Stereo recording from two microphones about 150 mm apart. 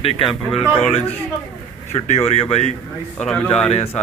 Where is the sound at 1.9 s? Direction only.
50° left (ahead or behind).